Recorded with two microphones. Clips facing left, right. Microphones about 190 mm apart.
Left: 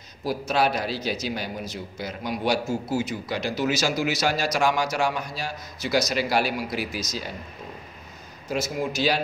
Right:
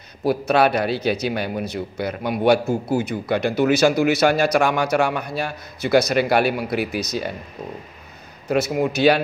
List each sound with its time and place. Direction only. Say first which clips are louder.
0.2 s a man's voice: right 6 dB; 60° right (ahead or behind)
8.5 s a man's voice: right 7 dB; 60° right (ahead or behind)